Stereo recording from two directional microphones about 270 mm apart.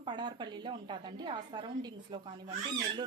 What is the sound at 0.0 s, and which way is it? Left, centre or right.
A woman's voice, centre.